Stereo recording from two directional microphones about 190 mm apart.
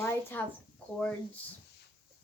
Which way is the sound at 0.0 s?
10° left (ahead or behind).